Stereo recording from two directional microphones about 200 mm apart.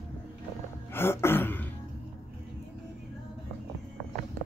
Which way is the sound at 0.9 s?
10° left (ahead or behind).